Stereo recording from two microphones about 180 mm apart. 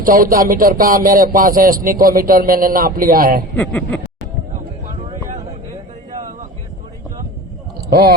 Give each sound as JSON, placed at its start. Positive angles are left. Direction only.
{"t": 0.0, "sound": "a man's voice", "side_deg": -50}
{"t": 3.5, "sound": "speech", "side_deg": 10}
{"t": 7.9, "sound": "speech", "side_deg": -60}